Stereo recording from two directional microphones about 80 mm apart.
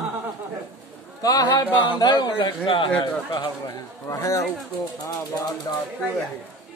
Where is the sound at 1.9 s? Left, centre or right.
Left.